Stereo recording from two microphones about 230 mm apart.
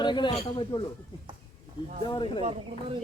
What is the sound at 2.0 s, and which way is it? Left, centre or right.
Speech, left.